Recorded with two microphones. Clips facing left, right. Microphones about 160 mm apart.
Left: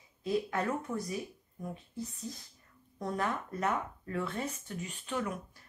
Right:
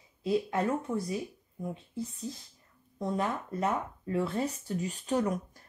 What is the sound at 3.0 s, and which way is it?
Speech, 25° right (ahead or behind).